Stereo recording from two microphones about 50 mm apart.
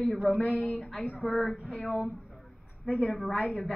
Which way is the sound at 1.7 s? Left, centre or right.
Centre.